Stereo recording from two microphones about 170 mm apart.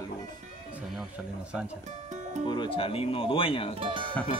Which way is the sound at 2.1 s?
45° right (ahead or behind).